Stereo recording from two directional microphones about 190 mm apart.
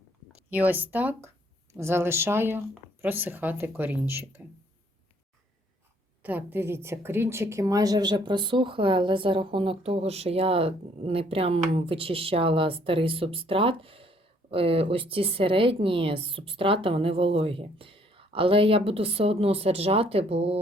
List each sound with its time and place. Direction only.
0.5 s speech: 10° right (ahead or behind)
6.2 s a woman's voice: 10° right (ahead or behind); by 20.6 s 30° right (ahead or behind)